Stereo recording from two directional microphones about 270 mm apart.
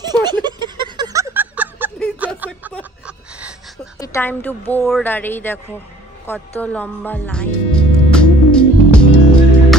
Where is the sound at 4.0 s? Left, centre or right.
Centre.